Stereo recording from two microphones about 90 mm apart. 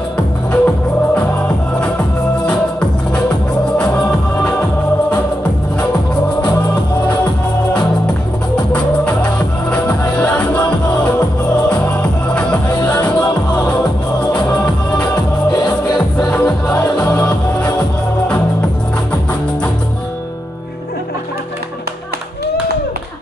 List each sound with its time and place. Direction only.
0.5 s music: 10° left (ahead or behind)
2.4 s music: 10° left (ahead or behind)
6.4 s music: 55° left (ahead or behind)
8.7 s music: 10° left (ahead or behind)
15.5 s music: 50° left (ahead or behind)
16.3 s music: 10° left (ahead or behind)